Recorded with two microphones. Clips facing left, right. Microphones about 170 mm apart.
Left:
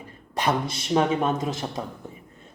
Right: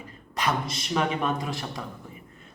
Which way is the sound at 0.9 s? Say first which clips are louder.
Left 4 dB; 25° left (ahead or behind).